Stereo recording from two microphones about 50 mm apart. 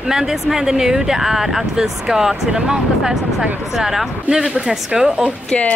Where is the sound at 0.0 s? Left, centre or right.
Centre.